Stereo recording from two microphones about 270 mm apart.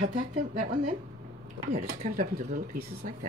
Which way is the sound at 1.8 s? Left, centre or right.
Right.